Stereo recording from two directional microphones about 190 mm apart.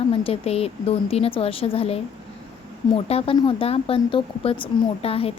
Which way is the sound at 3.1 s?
30° left (ahead or behind).